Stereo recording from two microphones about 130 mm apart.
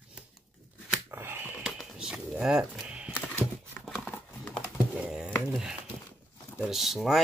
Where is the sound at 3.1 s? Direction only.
15° left (ahead or behind).